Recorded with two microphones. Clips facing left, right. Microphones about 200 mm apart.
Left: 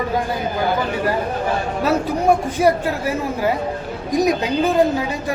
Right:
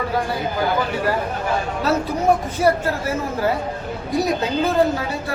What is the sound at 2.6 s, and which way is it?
Speech, 15° left (ahead or behind).